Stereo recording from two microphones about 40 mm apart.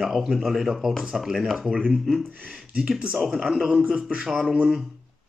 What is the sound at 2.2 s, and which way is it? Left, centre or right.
Speech, right.